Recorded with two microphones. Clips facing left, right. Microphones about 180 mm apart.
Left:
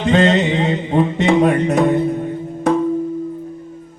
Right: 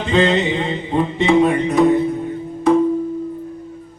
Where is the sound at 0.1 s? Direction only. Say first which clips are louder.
Left 2 dB; 50° left (ahead or behind).